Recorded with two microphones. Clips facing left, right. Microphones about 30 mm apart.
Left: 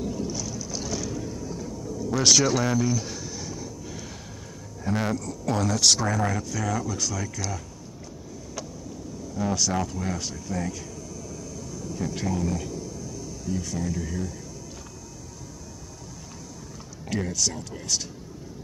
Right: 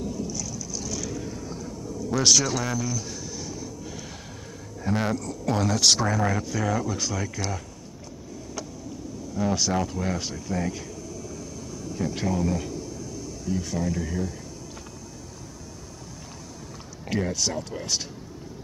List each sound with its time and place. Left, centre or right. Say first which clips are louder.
0.2 s boat: left 1 dB; left
1.1 s boat: left 1 dB; centre
2.0 s a sound: left 1 dB; centre
4.8 s speech: right 1 dB; centre; by 7.5 s right
9.4 s speech: right 1 dB; centre
11.9 s speech: right 2 dB; centre
17.1 s speech: right 1 dB; centre